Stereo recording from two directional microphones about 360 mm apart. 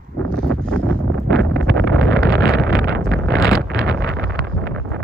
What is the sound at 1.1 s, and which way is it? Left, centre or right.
Wind noise, right.